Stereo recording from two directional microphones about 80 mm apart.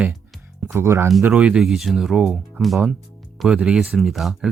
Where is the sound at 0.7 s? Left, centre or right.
Right.